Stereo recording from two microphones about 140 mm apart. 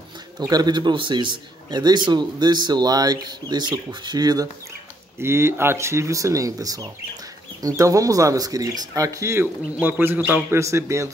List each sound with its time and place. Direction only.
0.4 s a man's voice: 30° right (ahead or behind)